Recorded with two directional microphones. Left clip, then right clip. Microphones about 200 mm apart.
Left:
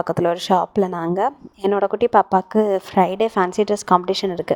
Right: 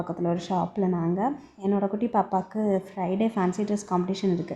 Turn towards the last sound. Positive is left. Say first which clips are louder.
# left 9 dB
turn(degrees=45)  # may be behind; listen again after turning